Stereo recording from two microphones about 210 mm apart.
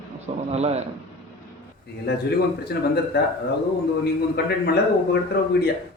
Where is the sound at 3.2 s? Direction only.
50° left (ahead or behind).